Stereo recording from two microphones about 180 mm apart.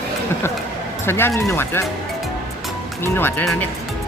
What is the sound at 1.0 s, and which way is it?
Speech, 15° left (ahead or behind).